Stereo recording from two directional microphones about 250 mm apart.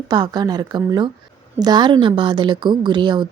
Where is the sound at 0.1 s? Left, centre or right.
Centre.